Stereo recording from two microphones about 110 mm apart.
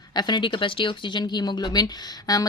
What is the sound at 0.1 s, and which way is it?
Speech, 40° left (ahead or behind).